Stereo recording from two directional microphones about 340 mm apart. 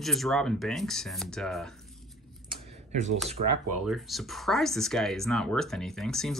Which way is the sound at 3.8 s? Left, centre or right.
Centre.